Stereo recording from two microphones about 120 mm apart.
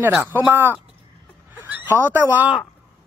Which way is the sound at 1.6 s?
20° right (ahead or behind).